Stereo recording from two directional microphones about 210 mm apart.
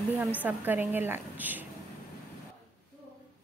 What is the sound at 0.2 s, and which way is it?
A woman's voice, 5° right (ahead or behind).